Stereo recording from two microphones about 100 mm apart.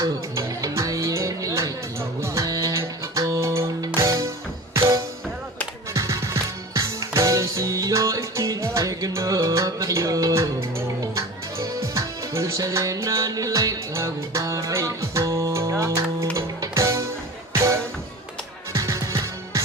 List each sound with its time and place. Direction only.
0.0 s music: 35° right (ahead or behind)
5.9 s music: 30° right (ahead or behind)